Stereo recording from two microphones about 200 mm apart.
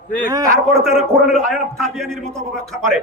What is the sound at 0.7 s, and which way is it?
A man's voice, centre (ahead or behind).